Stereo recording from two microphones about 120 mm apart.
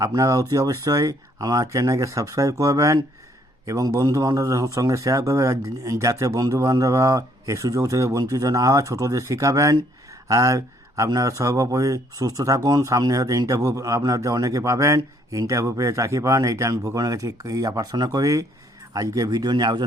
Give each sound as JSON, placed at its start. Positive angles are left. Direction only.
{"t": 0.0, "sound": "speech", "side_deg": -30}